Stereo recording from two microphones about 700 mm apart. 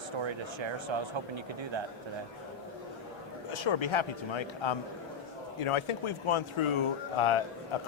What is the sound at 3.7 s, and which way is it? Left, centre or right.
Speech, left.